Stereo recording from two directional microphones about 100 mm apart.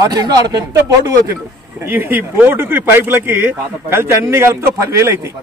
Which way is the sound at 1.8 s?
25° right (ahead or behind).